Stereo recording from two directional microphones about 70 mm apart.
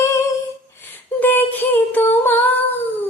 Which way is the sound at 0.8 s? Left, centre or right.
Left.